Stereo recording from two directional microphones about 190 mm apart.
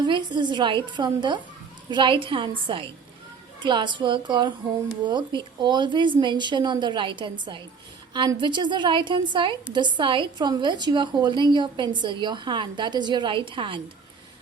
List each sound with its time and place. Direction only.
0.0 s a woman's voice: 25° right (ahead or behind)